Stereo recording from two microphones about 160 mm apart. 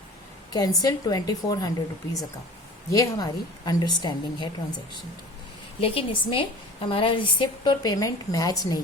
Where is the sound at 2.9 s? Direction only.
20° left (ahead or behind).